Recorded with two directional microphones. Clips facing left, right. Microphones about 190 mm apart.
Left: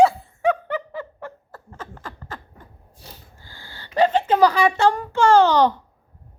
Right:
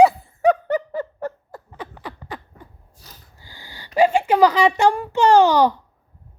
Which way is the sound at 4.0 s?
10° right (ahead or behind).